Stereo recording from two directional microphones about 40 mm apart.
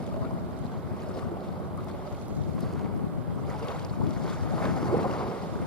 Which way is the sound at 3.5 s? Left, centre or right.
Centre.